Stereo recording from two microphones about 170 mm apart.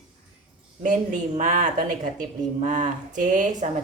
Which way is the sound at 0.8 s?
50° right (ahead or behind).